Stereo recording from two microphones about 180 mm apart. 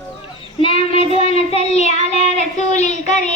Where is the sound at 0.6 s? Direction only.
30° left (ahead or behind).